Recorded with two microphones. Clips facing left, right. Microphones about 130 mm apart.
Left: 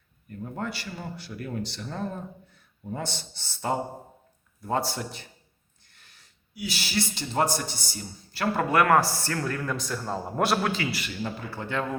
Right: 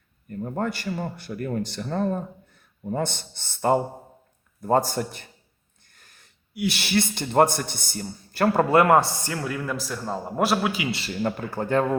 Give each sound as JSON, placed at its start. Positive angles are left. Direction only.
{"t": 0.3, "sound": "speech", "side_deg": -45}
{"t": 5.8, "sound": "a sound", "side_deg": -45}
{"t": 6.6, "sound": "a man's voice", "side_deg": -65}
{"t": 8.7, "sound": "speech", "side_deg": -25}
{"t": 9.3, "sound": "a man's voice", "side_deg": -5}
{"t": 11.2, "sound": "speech", "side_deg": -50}